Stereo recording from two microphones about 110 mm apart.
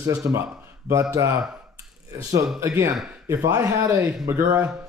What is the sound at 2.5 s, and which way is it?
Speech, 25° right (ahead or behind).